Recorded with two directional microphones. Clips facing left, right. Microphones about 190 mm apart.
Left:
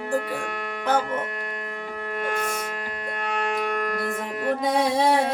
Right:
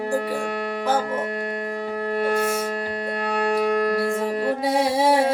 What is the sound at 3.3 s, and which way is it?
Music, 35° right (ahead or behind).